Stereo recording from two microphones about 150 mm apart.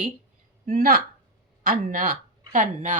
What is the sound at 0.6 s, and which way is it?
A woman's voice, 70° right (ahead or behind).